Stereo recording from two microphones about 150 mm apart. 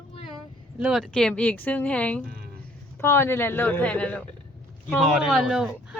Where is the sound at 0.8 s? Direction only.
5° right (ahead or behind).